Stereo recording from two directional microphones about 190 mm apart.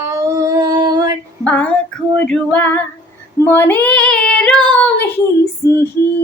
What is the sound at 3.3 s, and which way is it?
Child singing, 10° left (ahead or behind).